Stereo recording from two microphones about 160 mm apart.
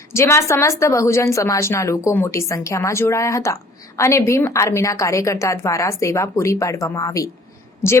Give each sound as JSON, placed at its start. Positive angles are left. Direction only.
{"t": 0.1, "sound": "a woman's voice", "side_deg": 15}